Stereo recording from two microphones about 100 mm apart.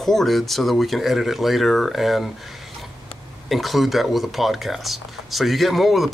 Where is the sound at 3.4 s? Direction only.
Centre (ahead or behind).